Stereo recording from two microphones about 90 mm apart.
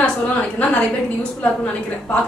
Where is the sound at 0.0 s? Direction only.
15° left (ahead or behind).